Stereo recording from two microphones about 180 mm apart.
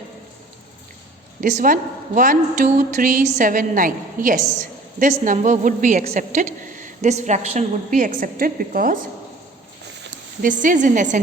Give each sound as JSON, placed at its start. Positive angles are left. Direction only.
{"t": 1.4, "sound": "a woman's voice", "side_deg": -45}
{"t": 10.1, "sound": "speech", "side_deg": -45}